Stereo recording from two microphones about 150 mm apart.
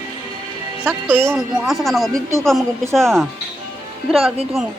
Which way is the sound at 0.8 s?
15° right (ahead or behind).